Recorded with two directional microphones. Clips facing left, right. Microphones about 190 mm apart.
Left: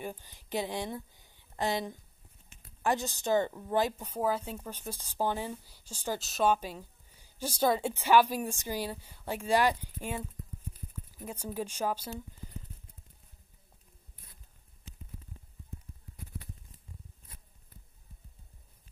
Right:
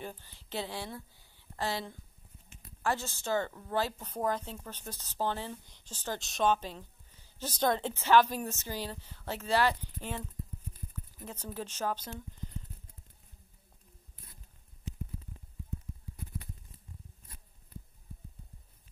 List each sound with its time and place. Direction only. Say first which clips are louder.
0.0 s a woman's voice: left 3 dB; 15° left (ahead or behind)